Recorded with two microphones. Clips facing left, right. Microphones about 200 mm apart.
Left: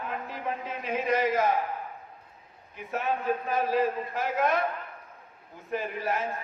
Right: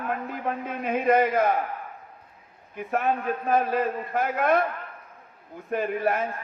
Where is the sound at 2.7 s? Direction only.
55° right (ahead or behind).